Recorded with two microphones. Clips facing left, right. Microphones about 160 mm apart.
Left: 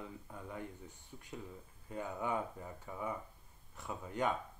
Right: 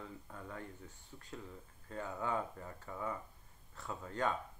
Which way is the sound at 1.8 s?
15° left (ahead or behind).